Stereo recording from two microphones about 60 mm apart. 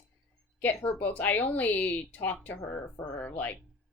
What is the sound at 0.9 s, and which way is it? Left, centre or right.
Speech, left.